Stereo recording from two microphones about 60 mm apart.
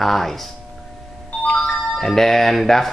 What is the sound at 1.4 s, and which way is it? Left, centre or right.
Music, left.